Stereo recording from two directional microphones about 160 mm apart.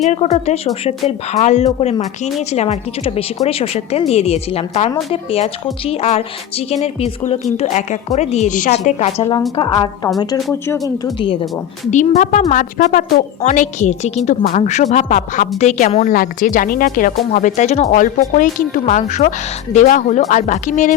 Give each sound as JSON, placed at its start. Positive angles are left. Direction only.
{"t": 0.0, "sound": "a woman's voice", "side_deg": 45}
{"t": 10.2, "sound": "speech", "side_deg": 15}
{"t": 11.0, "sound": "a woman's voice", "side_deg": 30}
{"t": 11.9, "sound": "a woman's voice", "side_deg": 50}
{"t": 17.9, "sound": "a woman's voice", "side_deg": 55}